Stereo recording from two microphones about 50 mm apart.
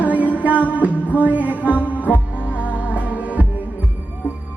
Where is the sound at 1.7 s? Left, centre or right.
Left.